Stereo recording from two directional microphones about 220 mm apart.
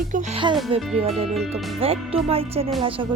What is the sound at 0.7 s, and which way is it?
Music, 25° right (ahead or behind).